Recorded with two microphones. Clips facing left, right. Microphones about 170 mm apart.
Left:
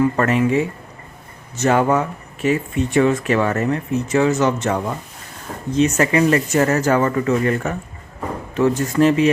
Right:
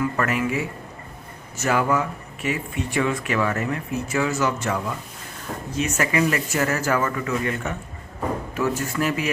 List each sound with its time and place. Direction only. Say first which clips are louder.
0.0 s speech: left 7 dB; 30° left (ahead or behind)
1.6 s speech: left 5 dB; 35° left (ahead or behind)